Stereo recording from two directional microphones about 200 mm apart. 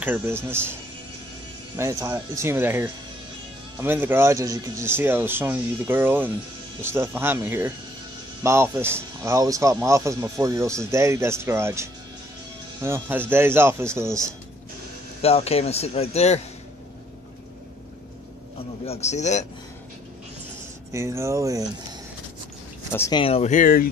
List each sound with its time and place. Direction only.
0.0 s speech: 10° right (ahead or behind)
1.8 s speech: 15° right (ahead or behind)
15.2 s speech: 30° left (ahead or behind)
18.9 s speech: 35° left (ahead or behind)
20.9 s speech: 15° right (ahead or behind)
22.9 s speech: 15° left (ahead or behind)
23.2 s speech: 30° left (ahead or behind)